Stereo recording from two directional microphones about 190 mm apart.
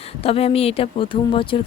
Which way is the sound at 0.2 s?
30° left (ahead or behind).